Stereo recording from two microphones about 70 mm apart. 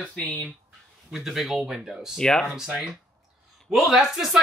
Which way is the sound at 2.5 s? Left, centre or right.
Centre.